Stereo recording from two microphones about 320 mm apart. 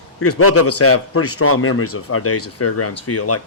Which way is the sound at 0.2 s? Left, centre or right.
Left.